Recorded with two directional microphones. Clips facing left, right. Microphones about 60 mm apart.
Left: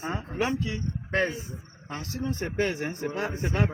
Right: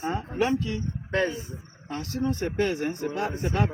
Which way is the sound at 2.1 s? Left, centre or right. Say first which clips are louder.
Right 4 dB; right.